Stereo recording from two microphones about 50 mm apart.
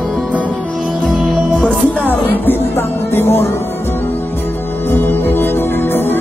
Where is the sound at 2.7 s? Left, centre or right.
Left.